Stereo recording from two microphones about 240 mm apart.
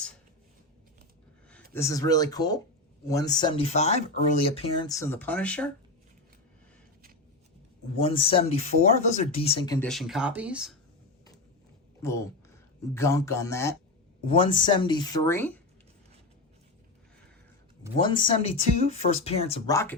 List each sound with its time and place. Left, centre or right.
1.7 s speech: centre
7.9 s speech: left
9.7 s speech: centre
12.8 s speech: centre
17.9 s speech: centre
19.6 s speech: centre